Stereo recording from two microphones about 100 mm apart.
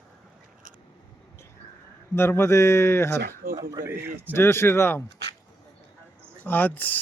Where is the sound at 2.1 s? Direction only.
25° left (ahead or behind).